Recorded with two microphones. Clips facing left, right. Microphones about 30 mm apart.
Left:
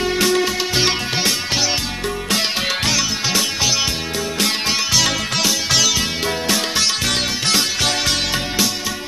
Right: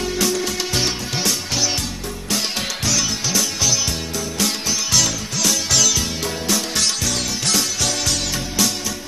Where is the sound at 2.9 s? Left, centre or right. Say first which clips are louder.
Left 2 dB; left.